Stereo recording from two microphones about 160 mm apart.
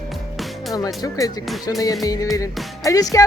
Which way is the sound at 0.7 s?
20° left (ahead or behind).